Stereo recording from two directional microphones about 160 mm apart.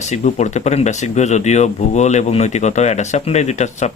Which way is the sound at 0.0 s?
50° left (ahead or behind).